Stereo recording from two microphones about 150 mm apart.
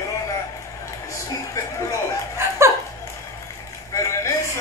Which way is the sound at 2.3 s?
20° right (ahead or behind).